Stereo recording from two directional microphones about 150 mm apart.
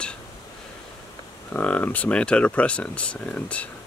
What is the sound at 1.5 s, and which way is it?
Speech, 10° left (ahead or behind).